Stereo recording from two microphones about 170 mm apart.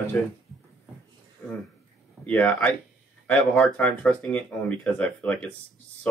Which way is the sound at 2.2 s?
5° left (ahead or behind).